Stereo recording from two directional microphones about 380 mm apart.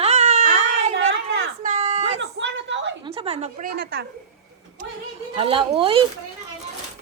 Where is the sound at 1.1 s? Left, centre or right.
Right.